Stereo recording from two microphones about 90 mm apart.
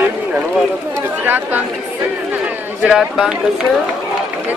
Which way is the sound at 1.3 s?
20° right (ahead or behind).